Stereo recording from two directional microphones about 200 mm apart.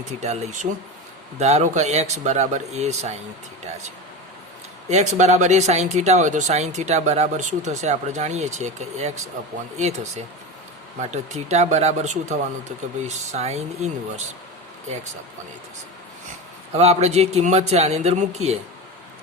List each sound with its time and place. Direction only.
0.2 s speech: 35° right (ahead or behind)
4.9 s speech: 35° right (ahead or behind)
16.7 s speech: 30° right (ahead or behind)